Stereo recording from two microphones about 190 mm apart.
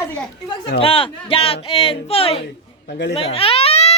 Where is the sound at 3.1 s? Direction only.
30° left (ahead or behind).